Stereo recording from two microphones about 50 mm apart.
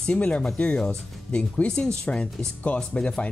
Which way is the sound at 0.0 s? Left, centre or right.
Left.